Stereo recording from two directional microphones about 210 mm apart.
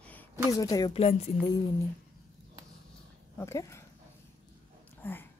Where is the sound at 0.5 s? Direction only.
15° left (ahead or behind).